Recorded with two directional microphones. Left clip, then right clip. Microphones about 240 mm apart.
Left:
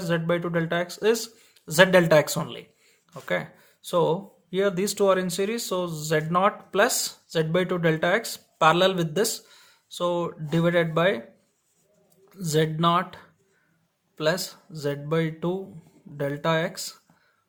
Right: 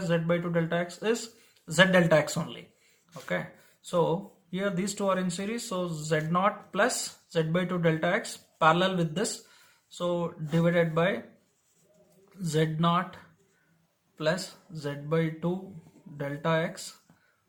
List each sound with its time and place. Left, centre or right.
0.0 s speech: left
12.3 s speech: left